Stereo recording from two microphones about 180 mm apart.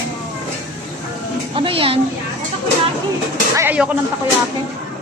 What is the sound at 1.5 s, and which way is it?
Speech, 30° right (ahead or behind).